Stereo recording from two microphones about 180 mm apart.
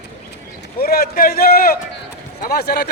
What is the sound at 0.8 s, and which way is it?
A man's voice, 55° left (ahead or behind).